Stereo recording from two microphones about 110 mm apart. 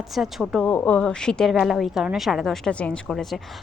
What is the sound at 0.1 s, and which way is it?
Speech, centre (ahead or behind).